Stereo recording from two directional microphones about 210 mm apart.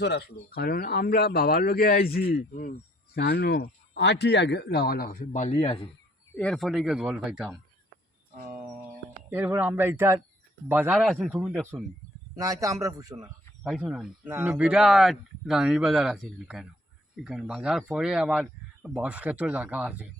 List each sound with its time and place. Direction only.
0.0 s speech: 50° left (ahead or behind); by 5.9 s 25° left (ahead or behind)
6.3 s speech: 5° left (ahead or behind)
8.4 s a sound: 40° right (ahead or behind)
9.3 s a man's voice: 10° right (ahead or behind)
10.9 s speech: centre (ahead or behind)
12.4 s a man's voice: 15° right (ahead or behind)
13.7 s speech: centre (ahead or behind)